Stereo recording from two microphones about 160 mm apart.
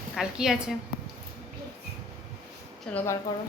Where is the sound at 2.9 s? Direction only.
15° left (ahead or behind).